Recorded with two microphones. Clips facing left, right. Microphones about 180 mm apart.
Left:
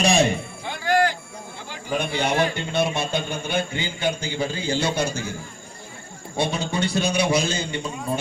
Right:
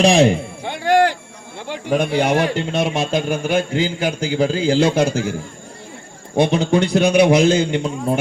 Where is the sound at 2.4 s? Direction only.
90° right.